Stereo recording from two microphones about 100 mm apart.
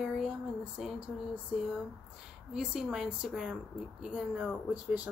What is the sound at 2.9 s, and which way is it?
Speech, 5° right (ahead or behind).